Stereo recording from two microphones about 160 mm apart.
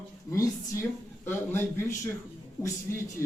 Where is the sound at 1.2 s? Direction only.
15° left (ahead or behind).